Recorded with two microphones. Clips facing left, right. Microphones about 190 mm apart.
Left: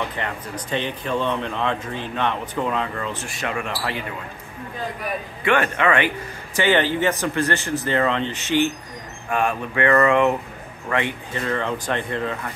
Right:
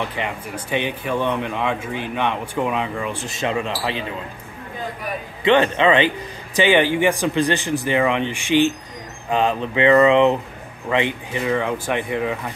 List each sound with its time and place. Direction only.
0.1 s speech: 15° right (ahead or behind)
5.4 s speech: 20° right (ahead or behind)